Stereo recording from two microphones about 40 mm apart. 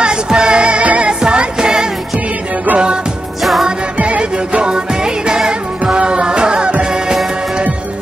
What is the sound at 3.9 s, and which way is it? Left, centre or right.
Music, right.